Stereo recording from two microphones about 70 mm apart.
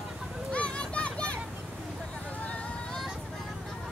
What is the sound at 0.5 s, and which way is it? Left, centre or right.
Children playing, centre.